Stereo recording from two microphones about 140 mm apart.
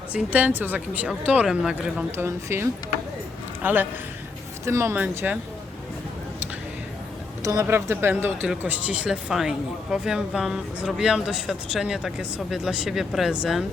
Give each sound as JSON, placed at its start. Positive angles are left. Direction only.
{"t": 0.1, "sound": "speech", "side_deg": -10}
{"t": 2.1, "sound": "speech", "side_deg": -20}
{"t": 7.4, "sound": "speech", "side_deg": -20}